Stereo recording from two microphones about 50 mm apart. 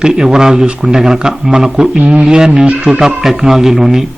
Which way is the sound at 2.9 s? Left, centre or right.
Centre.